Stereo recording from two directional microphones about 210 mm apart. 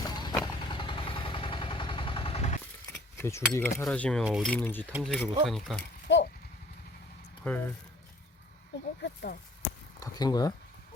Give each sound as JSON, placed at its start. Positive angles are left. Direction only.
{"t": 0.0, "sound": "vehicle", "side_deg": 20}
{"t": 2.9, "sound": "a sound", "side_deg": 10}
{"t": 3.5, "sound": "cutlery", "side_deg": 10}
{"t": 5.0, "sound": "speech", "side_deg": 0}
{"t": 6.1, "sound": "a sound", "side_deg": 60}
{"t": 7.4, "sound": "speech", "side_deg": 10}
{"t": 9.0, "sound": "speech", "side_deg": 50}
{"t": 10.0, "sound": "cutlery", "side_deg": 20}